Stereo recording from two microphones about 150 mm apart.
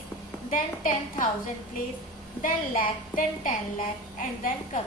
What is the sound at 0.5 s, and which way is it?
Speech, 60° left (ahead or behind).